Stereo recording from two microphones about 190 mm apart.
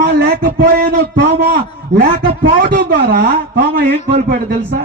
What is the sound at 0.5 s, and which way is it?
A man's voice, 50° right (ahead or behind).